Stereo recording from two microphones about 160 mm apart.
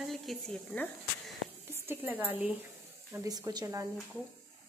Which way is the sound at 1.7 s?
15° right (ahead or behind).